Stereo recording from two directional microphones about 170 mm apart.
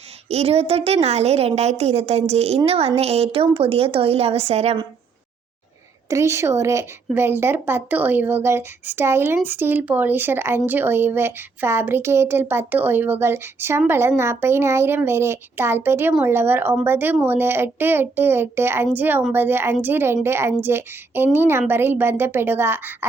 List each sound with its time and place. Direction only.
0.3 s a woman's voice: 40° right (ahead or behind)
6.1 s a woman's voice: 15° right (ahead or behind)